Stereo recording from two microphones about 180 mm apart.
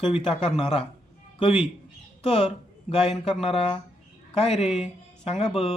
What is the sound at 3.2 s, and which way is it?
Speech, centre (ahead or behind).